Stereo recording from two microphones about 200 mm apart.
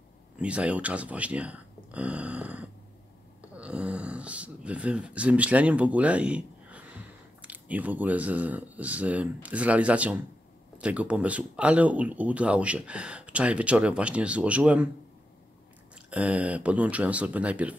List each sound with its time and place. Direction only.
0.4 s speech: 5° right (ahead or behind)
16.1 s speech: 5° right (ahead or behind)